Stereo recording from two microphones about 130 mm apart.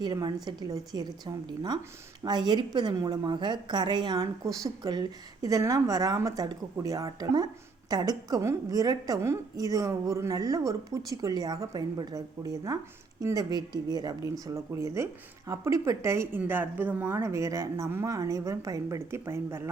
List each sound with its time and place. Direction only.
0.0 s a woman's voice: 35° right (ahead or behind)